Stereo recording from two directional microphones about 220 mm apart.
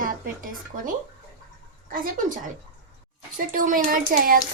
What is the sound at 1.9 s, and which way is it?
A woman's voice, 40° right (ahead or behind).